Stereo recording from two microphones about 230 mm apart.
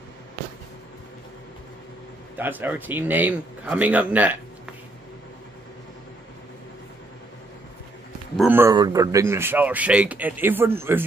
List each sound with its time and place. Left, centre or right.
2.3 s speech: centre
8.4 s speech: centre